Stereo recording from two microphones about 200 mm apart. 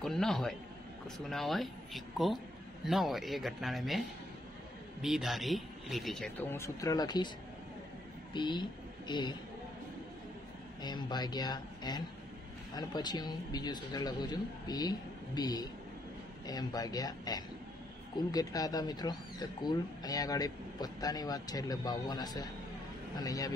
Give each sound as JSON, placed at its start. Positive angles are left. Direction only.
{"t": 0.0, "sound": "a man's voice", "side_deg": 0}
{"t": 5.0, "sound": "a man's voice", "side_deg": 0}
{"t": 6.5, "sound": "speech", "side_deg": 15}
{"t": 8.3, "sound": "a woman's voice", "side_deg": 25}
{"t": 10.8, "sound": "speech", "side_deg": 20}